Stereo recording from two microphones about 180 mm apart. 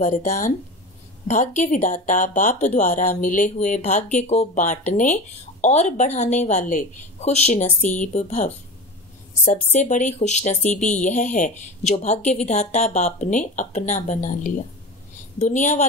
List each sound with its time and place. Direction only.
0.0 s speech: 45° left (ahead or behind)
7.6 s speech: 10° left (ahead or behind)
8.1 s speech: 40° left (ahead or behind)